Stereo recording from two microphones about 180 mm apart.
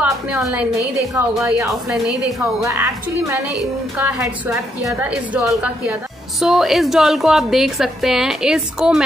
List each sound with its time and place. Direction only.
0.0 s a woman's voice: 10° right (ahead or behind)